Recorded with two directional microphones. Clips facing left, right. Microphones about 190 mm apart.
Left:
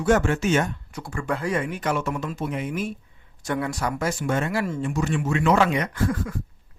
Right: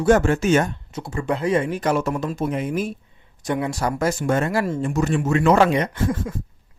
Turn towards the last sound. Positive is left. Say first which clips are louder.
# right 2 dB
turn(degrees=-25)  # may be behind; listen again after turning